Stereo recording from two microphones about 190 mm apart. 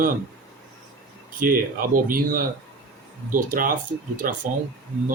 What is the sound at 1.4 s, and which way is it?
Speech, 50° right (ahead or behind).